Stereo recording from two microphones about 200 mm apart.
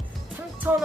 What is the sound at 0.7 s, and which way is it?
Speech, 10° right (ahead or behind).